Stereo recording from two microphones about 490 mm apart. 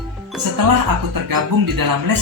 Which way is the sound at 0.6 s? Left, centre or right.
Right.